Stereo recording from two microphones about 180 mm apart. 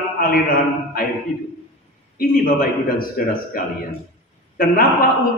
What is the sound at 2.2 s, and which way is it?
A man's voice, 55° left (ahead or behind).